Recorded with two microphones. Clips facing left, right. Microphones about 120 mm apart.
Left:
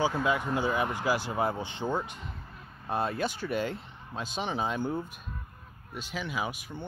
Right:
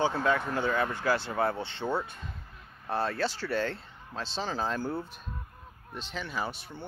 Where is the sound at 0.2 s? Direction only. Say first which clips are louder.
Even; 15° left (ahead or behind).